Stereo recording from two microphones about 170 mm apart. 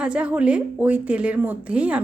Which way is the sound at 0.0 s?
5° right (ahead or behind).